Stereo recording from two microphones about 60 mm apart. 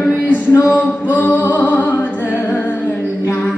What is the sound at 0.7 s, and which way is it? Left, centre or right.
Music, left.